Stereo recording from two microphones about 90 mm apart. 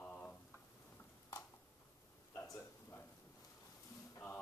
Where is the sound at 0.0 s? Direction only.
15° left (ahead or behind).